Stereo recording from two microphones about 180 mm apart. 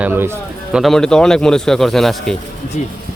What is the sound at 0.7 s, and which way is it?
Speech, centre (ahead or behind).